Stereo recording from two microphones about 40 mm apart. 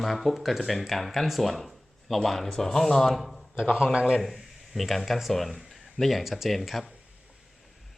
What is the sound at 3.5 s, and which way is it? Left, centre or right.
Speech, centre.